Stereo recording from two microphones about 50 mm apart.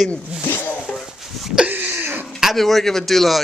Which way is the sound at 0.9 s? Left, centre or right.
Centre.